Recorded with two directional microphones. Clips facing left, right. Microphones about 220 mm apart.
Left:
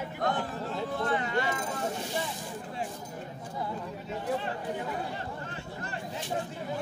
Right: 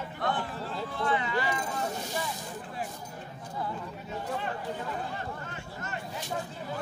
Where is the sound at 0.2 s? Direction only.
45° left (ahead or behind).